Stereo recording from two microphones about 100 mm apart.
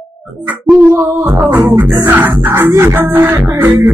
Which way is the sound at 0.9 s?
25° right (ahead or behind).